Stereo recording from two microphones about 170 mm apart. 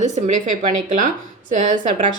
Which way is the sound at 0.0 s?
45° right (ahead or behind).